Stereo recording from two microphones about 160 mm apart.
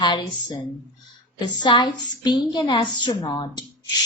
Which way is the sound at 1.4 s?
30° left (ahead or behind).